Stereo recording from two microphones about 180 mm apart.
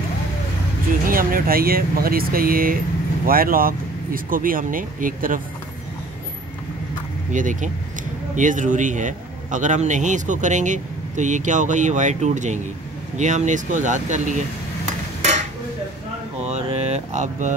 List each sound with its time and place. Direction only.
1.0 s a man's voice: 50° right (ahead or behind)
7.3 s a man's voice: 45° right (ahead or behind)
16.4 s mantra: 35° right (ahead or behind)